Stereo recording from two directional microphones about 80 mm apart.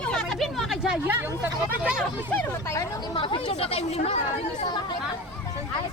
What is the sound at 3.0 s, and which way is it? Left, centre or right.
Speech, left.